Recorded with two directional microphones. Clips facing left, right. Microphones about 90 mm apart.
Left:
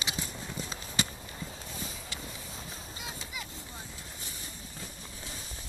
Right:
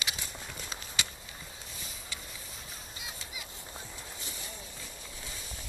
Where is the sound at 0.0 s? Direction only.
35° left (ahead or behind).